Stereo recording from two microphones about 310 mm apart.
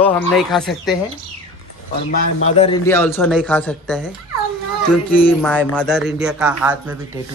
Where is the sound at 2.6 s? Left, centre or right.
Centre.